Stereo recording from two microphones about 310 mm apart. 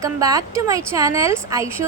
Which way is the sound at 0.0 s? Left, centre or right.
Centre.